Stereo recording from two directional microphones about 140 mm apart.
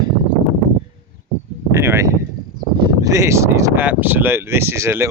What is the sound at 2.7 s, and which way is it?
Speech, 30° right (ahead or behind).